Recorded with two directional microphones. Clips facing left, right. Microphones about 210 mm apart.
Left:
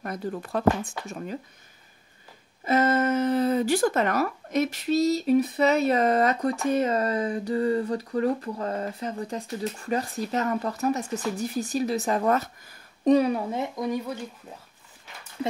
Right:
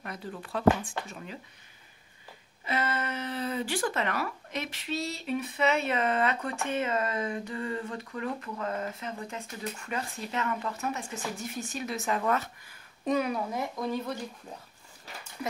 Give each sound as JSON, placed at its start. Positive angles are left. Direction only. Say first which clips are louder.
{"t": 0.0, "sound": "speech", "louder": "left 8 dB", "side_deg": 45}
{"t": 2.6, "sound": "speech", "louder": "left 10 dB", "side_deg": 45}
{"t": 13.8, "sound": "speech", "louder": "left 3 dB", "side_deg": 10}